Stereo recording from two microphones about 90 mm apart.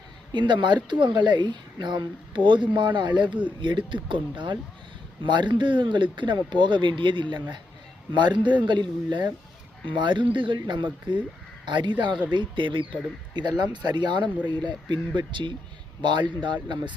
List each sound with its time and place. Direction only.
0.3 s speech: 60° right (ahead or behind)